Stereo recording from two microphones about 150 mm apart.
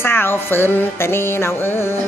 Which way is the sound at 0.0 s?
15° left (ahead or behind).